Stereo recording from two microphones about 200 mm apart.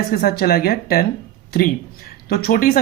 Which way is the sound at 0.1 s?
50° left (ahead or behind).